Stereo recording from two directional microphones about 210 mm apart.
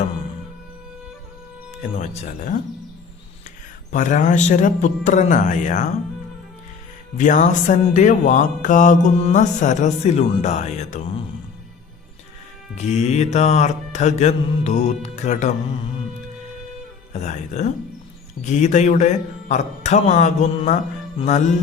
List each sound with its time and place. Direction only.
1.8 s speech: 35° left (ahead or behind)
3.9 s speech: 35° left (ahead or behind)
7.2 s speech: 35° left (ahead or behind)
12.7 s speech: 35° left (ahead or behind)
17.1 s speech: 35° left (ahead or behind)